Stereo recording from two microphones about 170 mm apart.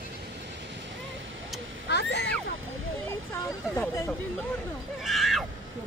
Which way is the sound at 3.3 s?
15° left (ahead or behind).